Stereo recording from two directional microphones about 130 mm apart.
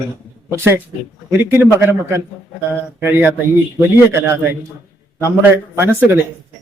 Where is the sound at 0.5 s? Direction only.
20° right (ahead or behind).